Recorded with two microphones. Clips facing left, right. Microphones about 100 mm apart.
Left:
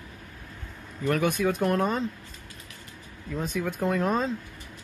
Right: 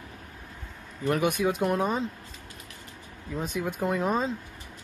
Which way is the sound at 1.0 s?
20° right (ahead or behind).